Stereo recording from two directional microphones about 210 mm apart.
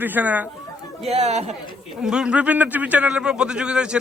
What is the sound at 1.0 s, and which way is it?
Speech, 30° right (ahead or behind).